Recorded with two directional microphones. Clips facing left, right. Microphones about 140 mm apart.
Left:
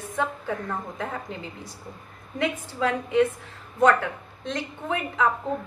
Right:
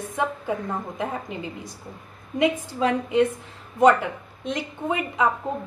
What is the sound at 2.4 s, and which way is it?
Speech, 20° right (ahead or behind).